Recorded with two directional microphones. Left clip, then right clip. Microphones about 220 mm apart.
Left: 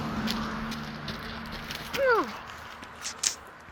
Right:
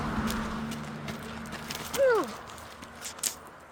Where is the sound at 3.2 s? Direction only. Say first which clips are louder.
Left 5 dB; 15° right (ahead or behind).